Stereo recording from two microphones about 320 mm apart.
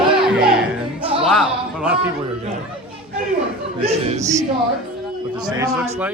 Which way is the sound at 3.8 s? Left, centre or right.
Centre.